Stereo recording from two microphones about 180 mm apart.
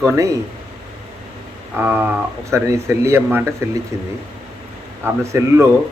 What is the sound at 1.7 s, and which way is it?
Speech, 10° right (ahead or behind).